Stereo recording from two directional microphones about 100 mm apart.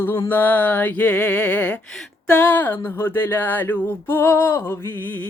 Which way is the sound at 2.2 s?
15° left (ahead or behind).